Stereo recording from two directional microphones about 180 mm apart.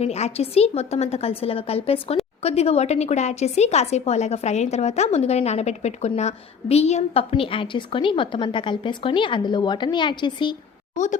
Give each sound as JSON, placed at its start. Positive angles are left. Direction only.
{"t": 0.0, "sound": "speech", "side_deg": 35}
{"t": 10.9, "sound": "a woman's voice", "side_deg": 40}